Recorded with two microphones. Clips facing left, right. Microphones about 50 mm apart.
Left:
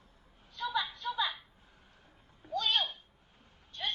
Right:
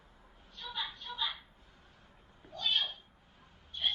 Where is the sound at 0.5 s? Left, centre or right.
Left.